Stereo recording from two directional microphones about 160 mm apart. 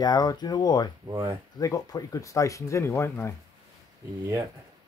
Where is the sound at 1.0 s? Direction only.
25° right (ahead or behind).